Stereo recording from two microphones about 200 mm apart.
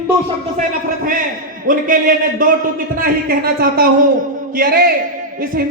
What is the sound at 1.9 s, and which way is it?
A man's voice, 40° right (ahead or behind).